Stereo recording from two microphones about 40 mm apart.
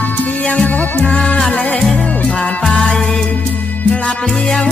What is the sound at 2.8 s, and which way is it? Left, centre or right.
Music, centre.